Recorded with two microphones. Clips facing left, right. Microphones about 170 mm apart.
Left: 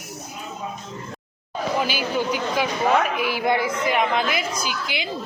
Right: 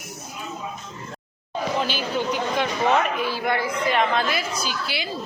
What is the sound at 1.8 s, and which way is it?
Speech, 5° left (ahead or behind).